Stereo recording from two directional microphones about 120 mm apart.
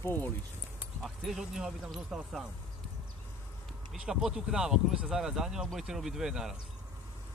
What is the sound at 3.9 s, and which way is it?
Speech, 5° right (ahead or behind).